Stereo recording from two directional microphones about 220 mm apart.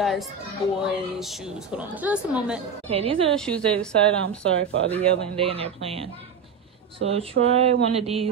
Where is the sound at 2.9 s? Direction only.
25° right (ahead or behind).